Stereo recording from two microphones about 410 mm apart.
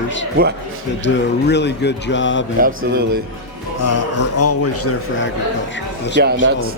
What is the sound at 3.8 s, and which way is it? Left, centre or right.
Speech, left.